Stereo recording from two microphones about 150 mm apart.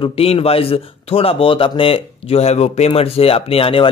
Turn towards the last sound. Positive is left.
turn(degrees=40)  # may be behind; listen again after turning